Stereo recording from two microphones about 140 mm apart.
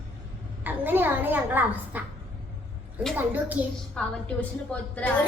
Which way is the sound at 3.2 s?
10° right (ahead or behind).